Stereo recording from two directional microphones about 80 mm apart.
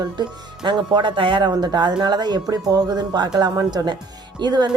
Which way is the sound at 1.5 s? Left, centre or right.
Right.